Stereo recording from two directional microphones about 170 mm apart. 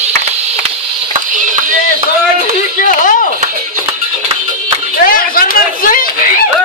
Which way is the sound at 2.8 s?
50° left (ahead or behind).